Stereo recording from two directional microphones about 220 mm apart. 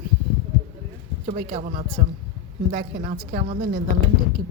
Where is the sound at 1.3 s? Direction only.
30° right (ahead or behind).